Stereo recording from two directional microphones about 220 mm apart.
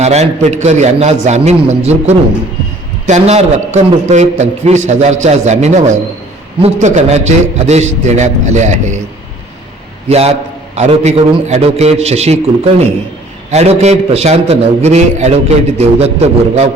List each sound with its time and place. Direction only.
0.0 s a man's voice: 30° right (ahead or behind)
10.1 s a man's voice: 30° right (ahead or behind)
13.5 s a man's voice: 30° right (ahead or behind)